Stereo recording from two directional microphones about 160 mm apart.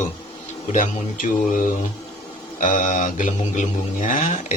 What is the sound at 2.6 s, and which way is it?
Mantra, 55° left (ahead or behind).